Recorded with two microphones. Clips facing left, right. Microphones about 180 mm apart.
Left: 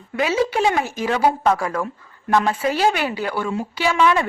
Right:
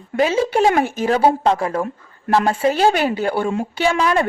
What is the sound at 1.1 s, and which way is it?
A woman's voice, 30° right (ahead or behind).